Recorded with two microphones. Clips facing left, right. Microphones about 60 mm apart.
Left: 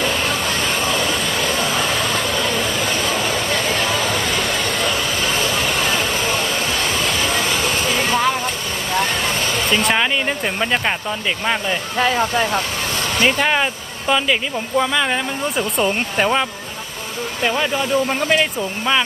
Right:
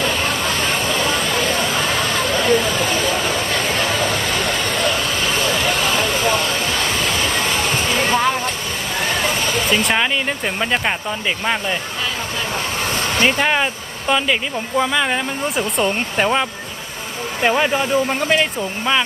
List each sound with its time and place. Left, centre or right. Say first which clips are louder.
0.0 s a sound: even; centre
4.7 s vehicle: right 1 dB; centre
6.8 s a sound: even; centre
9.6 s music: left 1 dB; centre
11.4 s speech: left 1 dB; centre
13.2 s speech: even; centre
17.4 s speech: right 3 dB; right
17.9 s speech: left 3 dB; centre